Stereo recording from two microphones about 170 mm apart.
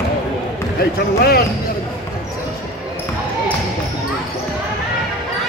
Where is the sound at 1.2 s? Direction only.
65° left (ahead or behind).